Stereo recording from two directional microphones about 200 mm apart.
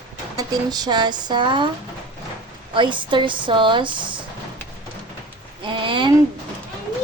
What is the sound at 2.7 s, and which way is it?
Speech, 25° right (ahead or behind).